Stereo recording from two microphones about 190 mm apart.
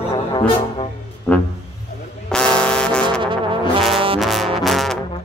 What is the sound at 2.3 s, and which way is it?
Music, 5° left (ahead or behind).